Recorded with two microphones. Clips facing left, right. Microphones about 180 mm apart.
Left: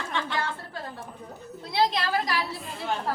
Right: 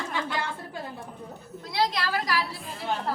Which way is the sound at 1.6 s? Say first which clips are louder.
Left 2 dB; 25° left (ahead or behind).